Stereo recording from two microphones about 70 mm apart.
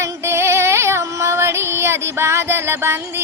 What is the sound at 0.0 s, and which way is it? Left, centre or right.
Music, right.